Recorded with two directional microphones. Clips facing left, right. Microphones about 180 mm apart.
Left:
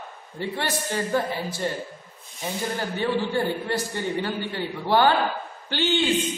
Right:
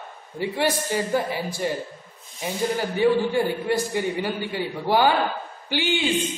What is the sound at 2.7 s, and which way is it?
A man's voice, 10° right (ahead or behind).